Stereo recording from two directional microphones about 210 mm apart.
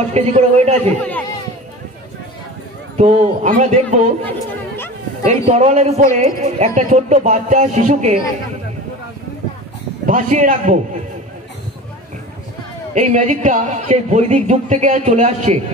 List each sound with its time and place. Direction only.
0.1 s a man's voice: 30° right (ahead or behind)
0.8 s speech: 10° left (ahead or behind)
3.0 s a man's voice: 35° right (ahead or behind)
5.3 s a man's voice: 35° right (ahead or behind)
10.0 s a man's voice: 35° right (ahead or behind)
12.9 s a man's voice: 35° right (ahead or behind)